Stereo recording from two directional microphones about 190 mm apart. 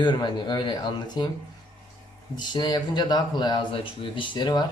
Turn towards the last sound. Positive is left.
turn(degrees=20)  # may be behind; listen again after turning